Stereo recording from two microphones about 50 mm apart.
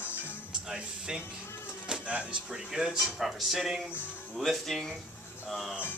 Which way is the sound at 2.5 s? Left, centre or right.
Centre.